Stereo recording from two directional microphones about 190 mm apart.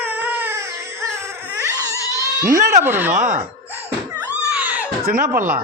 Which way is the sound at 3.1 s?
40° right (ahead or behind).